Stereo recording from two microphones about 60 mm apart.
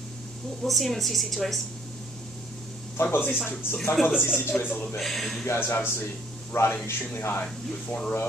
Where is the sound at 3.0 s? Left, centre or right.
Left.